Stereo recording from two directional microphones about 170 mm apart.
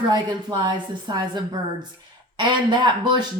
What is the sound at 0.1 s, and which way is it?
Speech, 25° right (ahead or behind).